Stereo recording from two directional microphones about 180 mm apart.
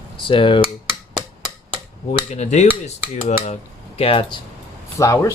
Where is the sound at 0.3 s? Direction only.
30° left (ahead or behind).